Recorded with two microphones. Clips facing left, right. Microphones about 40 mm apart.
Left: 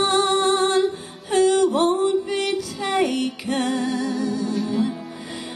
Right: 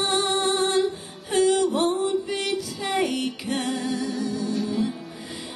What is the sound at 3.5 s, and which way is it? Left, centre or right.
Music, left.